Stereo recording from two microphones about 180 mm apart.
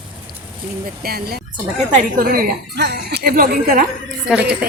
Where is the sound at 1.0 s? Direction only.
60° right (ahead or behind).